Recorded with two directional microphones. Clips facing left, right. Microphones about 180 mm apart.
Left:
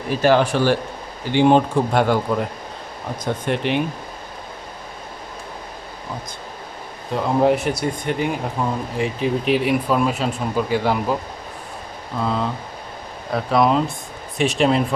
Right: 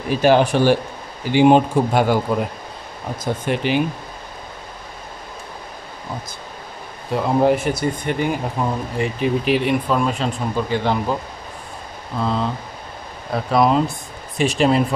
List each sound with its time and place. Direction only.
0.2 s speech: 15° right (ahead or behind); by 3.8 s centre (ahead or behind)
7.1 s speech: 5° right (ahead or behind)
12.2 s speech: centre (ahead or behind)